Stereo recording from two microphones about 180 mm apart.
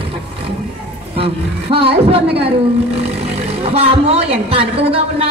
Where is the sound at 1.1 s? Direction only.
30° right (ahead or behind).